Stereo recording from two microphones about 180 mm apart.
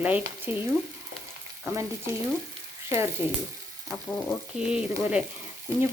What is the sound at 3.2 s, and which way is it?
Frying, 30° left (ahead or behind).